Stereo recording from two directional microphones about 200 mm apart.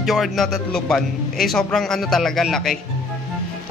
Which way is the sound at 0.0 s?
Centre (ahead or behind).